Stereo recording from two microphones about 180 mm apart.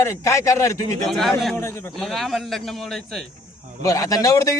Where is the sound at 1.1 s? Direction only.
Centre (ahead or behind).